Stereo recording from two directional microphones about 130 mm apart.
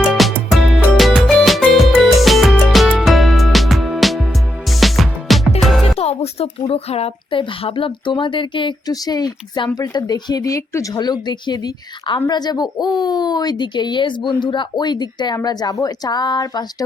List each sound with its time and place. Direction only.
0.1 s music: centre (ahead or behind)
6.0 s speech: 55° left (ahead or behind); by 16.6 s 30° left (ahead or behind)